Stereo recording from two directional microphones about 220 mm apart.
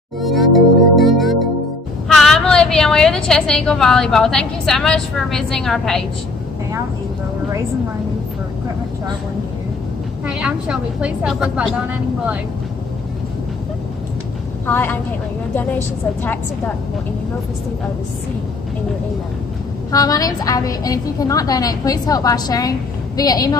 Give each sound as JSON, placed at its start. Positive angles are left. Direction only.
{"t": 0.2, "sound": "music", "side_deg": 0}
{"t": 2.0, "sound": "a woman's voice", "side_deg": 0}
{"t": 10.2, "sound": "a woman's voice", "side_deg": -5}
{"t": 14.7, "sound": "a woman's voice", "side_deg": 10}
{"t": 19.9, "sound": "a woman's voice", "side_deg": 15}